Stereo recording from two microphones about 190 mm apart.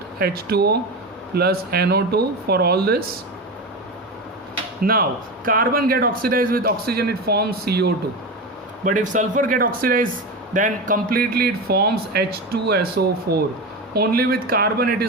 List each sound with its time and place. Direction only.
0.2 s speech: 55° right (ahead or behind)
4.8 s speech: 50° right (ahead or behind)
8.8 s speech: 40° right (ahead or behind)